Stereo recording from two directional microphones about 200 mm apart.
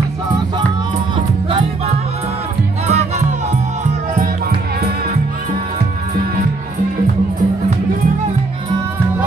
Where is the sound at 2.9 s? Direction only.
30° right (ahead or behind).